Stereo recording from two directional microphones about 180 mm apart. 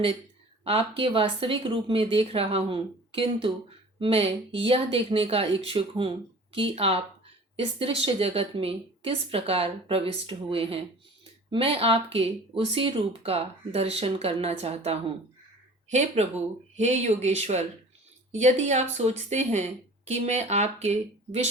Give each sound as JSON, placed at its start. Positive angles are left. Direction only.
{"t": 0.6, "sound": "speech", "side_deg": -30}